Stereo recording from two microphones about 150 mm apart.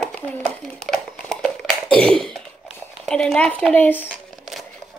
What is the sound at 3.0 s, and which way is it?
Speech, 5° left (ahead or behind).